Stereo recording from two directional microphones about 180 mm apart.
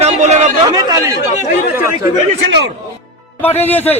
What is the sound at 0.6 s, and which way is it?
Speech, 20° right (ahead or behind).